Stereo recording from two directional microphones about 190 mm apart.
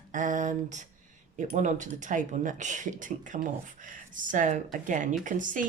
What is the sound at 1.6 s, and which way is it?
Speech, 40° right (ahead or behind).